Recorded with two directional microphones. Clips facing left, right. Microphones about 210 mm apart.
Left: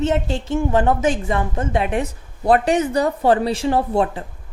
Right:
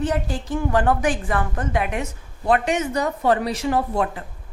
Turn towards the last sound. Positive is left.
turn(degrees=30)  # may be behind; listen again after turning